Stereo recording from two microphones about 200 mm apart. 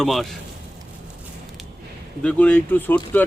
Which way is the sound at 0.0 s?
Centre (ahead or behind).